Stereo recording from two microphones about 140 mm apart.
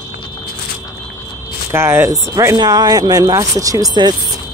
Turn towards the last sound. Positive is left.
turn(degrees=-30)  # may be behind; listen again after turning